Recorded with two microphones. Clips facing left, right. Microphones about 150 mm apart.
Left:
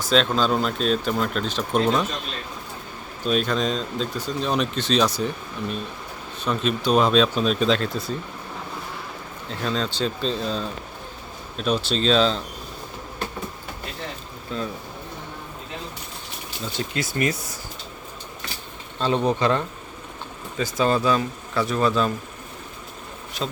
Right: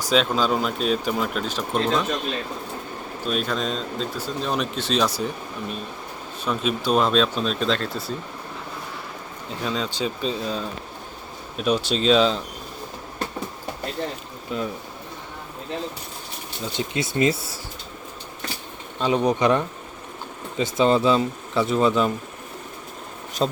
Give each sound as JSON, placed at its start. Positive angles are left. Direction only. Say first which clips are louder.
{"t": 0.0, "sound": "speech", "louder": "even", "side_deg": -10}
{"t": 3.2, "sound": "speech", "louder": "left 3 dB", "side_deg": 0}
{"t": 9.5, "sound": "speech", "louder": "left 1 dB", "side_deg": -10}
{"t": 14.5, "sound": "speech", "louder": "right 2 dB", "side_deg": -15}
{"t": 16.7, "sound": "speech", "louder": "right 2 dB", "side_deg": -20}
{"t": 18.9, "sound": "speech", "louder": "right 1 dB", "side_deg": -10}
{"t": 23.4, "sound": "speech", "louder": "right 6 dB", "side_deg": -35}